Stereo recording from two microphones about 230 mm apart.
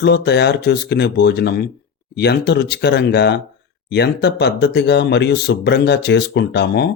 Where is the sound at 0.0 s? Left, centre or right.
Left.